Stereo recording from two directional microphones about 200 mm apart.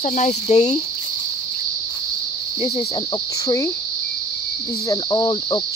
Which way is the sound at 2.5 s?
30° left (ahead or behind).